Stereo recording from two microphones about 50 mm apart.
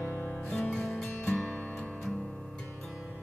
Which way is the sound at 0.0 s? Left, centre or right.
Left.